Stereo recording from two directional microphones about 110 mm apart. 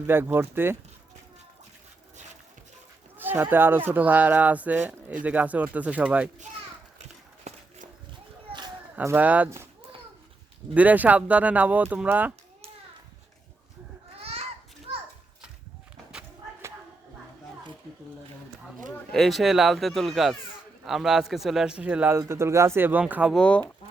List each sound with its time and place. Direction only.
0.1 s speech: 20° right (ahead or behind)
3.2 s speech: 20° right (ahead or behind)
7.5 s a sound: 80° right
9.1 s speech: 15° right (ahead or behind)
10.8 s speech: 15° right (ahead or behind)
14.2 s children playing: 65° right (ahead or behind)
18.9 s speech: centre (ahead or behind); by 23.3 s 15° right (ahead or behind)
23.3 s speech: 10° left (ahead or behind)